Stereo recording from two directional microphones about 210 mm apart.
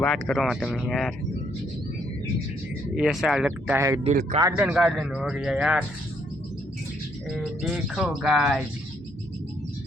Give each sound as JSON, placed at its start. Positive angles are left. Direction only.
{"t": 0.0, "sound": "speech", "side_deg": 0}
{"t": 2.9, "sound": "speech", "side_deg": 0}
{"t": 3.8, "sound": "speech", "side_deg": -15}
{"t": 4.0, "sound": "speech", "side_deg": -35}
{"t": 4.4, "sound": "speech", "side_deg": -10}
{"t": 7.3, "sound": "speech", "side_deg": 0}